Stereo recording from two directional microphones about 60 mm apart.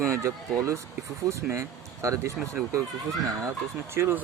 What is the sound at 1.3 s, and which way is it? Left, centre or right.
Speech, right.